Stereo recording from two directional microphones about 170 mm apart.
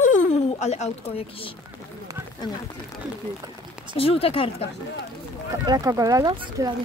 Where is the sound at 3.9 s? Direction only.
35° left (ahead or behind).